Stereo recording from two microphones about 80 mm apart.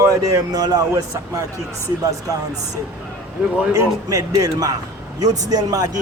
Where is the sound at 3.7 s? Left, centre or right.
Right.